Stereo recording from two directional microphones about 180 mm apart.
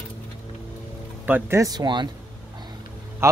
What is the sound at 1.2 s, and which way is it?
Speech, 10° right (ahead or behind).